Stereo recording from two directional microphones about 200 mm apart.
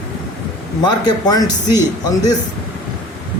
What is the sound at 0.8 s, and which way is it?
Speech, 20° left (ahead or behind).